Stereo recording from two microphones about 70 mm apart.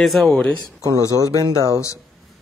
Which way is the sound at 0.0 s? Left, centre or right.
Centre.